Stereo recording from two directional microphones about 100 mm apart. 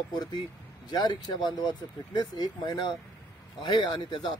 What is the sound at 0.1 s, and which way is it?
Speech, 45° left (ahead or behind).